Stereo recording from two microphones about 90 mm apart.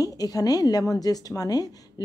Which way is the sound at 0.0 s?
45° left (ahead or behind).